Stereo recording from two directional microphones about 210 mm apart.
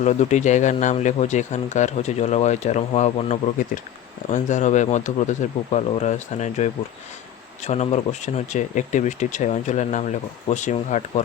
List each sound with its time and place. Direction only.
0.0 s speech: 35° left (ahead or behind)
7.7 s speech: 30° left (ahead or behind)